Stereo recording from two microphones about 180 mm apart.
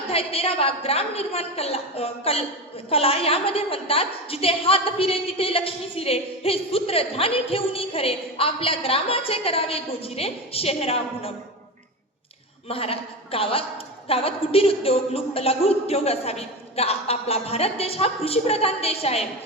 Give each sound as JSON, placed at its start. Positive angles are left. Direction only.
{"t": 0.1, "sound": "a woman's voice", "side_deg": 30}
{"t": 12.6, "sound": "a woman's voice", "side_deg": 30}